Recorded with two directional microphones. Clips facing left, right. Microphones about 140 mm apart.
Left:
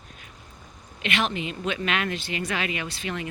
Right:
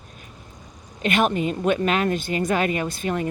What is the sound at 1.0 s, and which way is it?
Speech, 50° right (ahead or behind).